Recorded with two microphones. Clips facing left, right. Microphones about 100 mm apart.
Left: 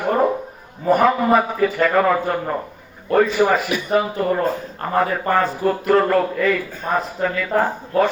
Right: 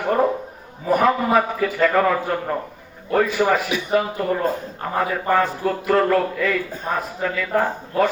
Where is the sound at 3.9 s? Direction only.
5° left (ahead or behind).